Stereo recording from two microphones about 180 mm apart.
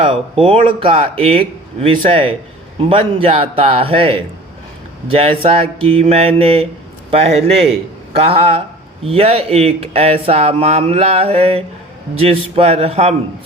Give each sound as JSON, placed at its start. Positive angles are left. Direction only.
{"t": 0.0, "sound": "speech", "side_deg": -30}